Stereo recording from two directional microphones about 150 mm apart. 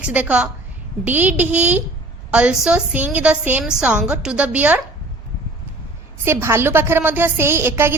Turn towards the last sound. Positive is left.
turn(degrees=-15)  # may be behind; listen again after turning